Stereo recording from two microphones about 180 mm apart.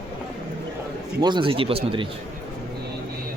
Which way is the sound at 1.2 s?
25° right (ahead or behind).